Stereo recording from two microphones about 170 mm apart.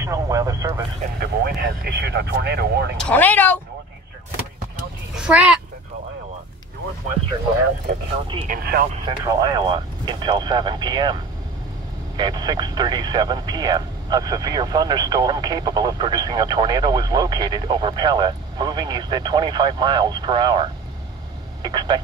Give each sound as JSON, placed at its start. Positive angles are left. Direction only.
{"t": 0.0, "sound": "vehicle", "side_deg": -20}
{"t": 1.2, "sound": "speech", "side_deg": -75}
{"t": 3.0, "sound": "speech", "side_deg": 10}
{"t": 5.1, "sound": "a sound", "side_deg": -5}
{"t": 8.5, "sound": "speech", "side_deg": -60}
{"t": 9.0, "sound": "speech", "side_deg": -25}
{"t": 12.2, "sound": "speech", "side_deg": -25}
{"t": 21.6, "sound": "speech", "side_deg": -25}